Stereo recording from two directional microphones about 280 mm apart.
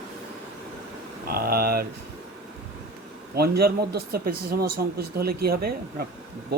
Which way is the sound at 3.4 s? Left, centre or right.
Right.